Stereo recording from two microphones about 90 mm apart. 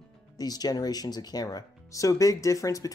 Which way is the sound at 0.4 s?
45° left (ahead or behind).